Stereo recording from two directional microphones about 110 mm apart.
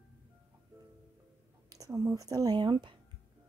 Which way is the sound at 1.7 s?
30° right (ahead or behind).